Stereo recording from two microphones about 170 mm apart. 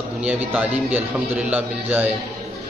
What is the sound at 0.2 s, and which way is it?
A man's voice, 10° right (ahead or behind).